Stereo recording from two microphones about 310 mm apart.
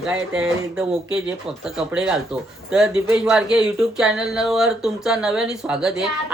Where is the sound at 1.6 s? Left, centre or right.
Centre.